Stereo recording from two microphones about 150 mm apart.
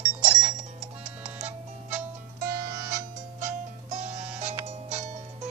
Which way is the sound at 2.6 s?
85° right.